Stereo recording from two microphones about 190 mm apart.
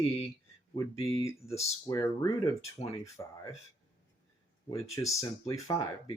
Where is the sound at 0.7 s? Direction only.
15° left (ahead or behind).